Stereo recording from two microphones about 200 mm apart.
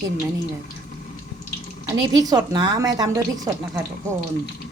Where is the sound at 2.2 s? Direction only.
20° right (ahead or behind).